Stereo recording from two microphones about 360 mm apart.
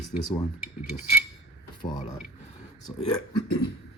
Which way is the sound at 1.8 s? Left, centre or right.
Centre.